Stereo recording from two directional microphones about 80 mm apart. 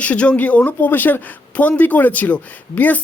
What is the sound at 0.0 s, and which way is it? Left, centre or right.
Speech, centre.